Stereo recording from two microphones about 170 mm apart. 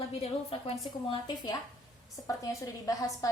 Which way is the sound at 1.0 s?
30° left (ahead or behind).